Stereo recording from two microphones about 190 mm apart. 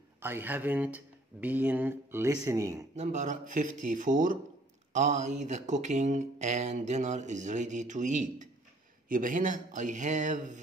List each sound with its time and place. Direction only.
0.2 s speech: 10° right (ahead or behind)
3.0 s speech: 40° right (ahead or behind)